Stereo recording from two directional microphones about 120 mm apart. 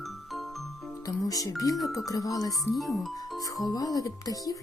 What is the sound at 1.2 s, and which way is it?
Speech, 30° left (ahead or behind).